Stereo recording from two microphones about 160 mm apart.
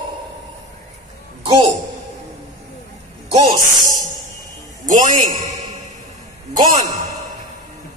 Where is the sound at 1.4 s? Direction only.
35° right (ahead or behind).